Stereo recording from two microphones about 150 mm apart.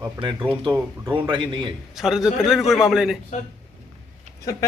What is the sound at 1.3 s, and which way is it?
Speech, 30° right (ahead or behind).